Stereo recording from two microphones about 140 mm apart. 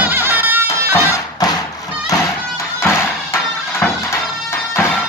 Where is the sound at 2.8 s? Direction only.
20° left (ahead or behind).